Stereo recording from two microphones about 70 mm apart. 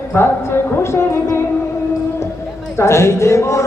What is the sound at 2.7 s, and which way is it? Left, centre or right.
Speech, left.